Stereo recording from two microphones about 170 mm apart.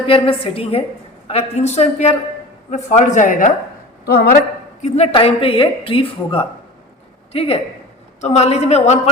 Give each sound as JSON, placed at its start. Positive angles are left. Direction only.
{"t": 0.0, "sound": "a woman's voice", "side_deg": 30}
{"t": 4.0, "sound": "a man's voice", "side_deg": 65}
{"t": 4.8, "sound": "a woman's voice", "side_deg": 35}